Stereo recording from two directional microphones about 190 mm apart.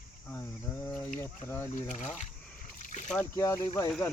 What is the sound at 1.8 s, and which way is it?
Speech, 40° left (ahead or behind).